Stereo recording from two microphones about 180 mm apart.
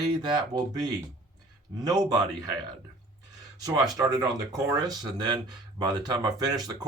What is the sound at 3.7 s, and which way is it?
Speech, 20° right (ahead or behind).